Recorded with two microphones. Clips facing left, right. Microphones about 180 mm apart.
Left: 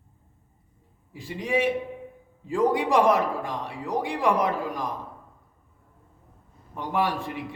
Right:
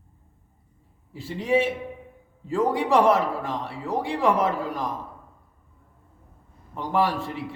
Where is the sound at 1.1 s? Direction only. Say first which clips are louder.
Right 4 dB; 15° left (ahead or behind).